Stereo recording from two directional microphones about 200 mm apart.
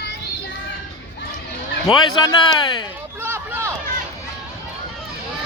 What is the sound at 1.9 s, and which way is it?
Speech, 20° left (ahead or behind).